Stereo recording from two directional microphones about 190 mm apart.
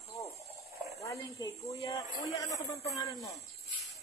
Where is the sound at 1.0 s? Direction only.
15° left (ahead or behind).